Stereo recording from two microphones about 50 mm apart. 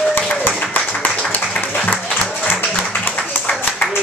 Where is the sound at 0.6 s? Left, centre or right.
Left.